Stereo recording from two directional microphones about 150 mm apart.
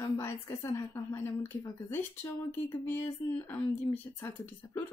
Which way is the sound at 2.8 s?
15° left (ahead or behind).